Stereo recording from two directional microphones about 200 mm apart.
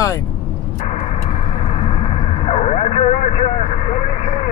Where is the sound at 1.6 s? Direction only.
30° left (ahead or behind).